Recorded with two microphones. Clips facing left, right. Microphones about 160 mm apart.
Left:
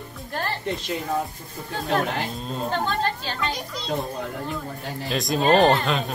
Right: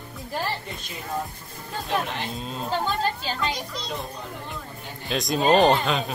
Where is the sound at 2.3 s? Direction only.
Centre (ahead or behind).